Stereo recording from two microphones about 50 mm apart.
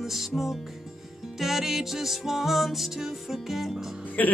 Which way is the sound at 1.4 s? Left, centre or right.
Centre.